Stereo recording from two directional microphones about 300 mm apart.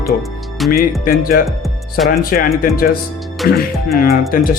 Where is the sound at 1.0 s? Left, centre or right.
Left.